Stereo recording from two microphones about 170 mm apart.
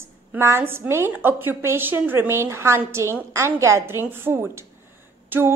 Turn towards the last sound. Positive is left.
turn(degrees=-15)  # may be behind; listen again after turning